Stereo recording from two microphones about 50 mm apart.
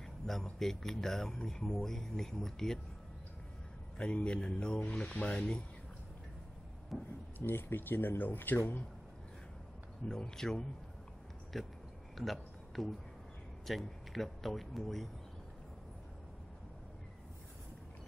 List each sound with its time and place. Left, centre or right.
0.0 s speech: centre
4.0 s speech: left
6.9 s speech: centre
7.3 s speech: left
10.0 s speech: centre
12.2 s a sound: centre
13.7 s speech: centre